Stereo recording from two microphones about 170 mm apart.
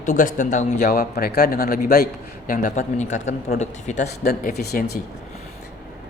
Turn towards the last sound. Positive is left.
turn(degrees=70)  # may be behind; listen again after turning